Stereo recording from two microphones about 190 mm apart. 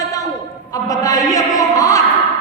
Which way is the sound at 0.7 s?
15° left (ahead or behind).